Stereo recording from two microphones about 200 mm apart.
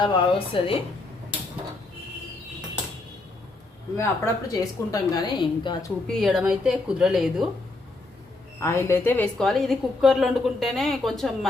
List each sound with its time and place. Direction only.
0.0 s a woman's voice: 25° left (ahead or behind)
3.9 s a woman's voice: 15° left (ahead or behind)
6.1 s a woman's voice: centre (ahead or behind)
8.6 s a woman's voice: 15° left (ahead or behind)